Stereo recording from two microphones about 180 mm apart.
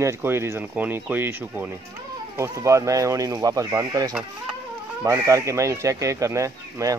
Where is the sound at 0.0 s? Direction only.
15° right (ahead or behind).